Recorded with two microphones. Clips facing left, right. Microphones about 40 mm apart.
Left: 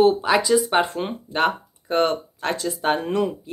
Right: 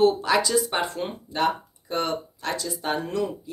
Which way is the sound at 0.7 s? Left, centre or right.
Left.